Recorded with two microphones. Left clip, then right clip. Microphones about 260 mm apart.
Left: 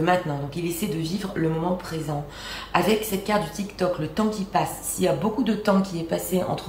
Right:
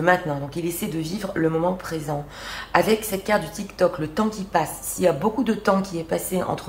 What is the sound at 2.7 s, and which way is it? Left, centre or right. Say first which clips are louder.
A woman's voice: right 2 dB; centre.